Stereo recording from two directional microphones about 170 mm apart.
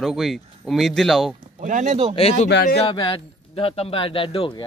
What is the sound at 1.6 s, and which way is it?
Speech, 45° right (ahead or behind).